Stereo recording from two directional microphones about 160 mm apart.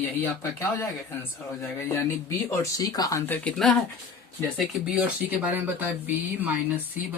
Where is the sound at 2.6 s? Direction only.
20° left (ahead or behind).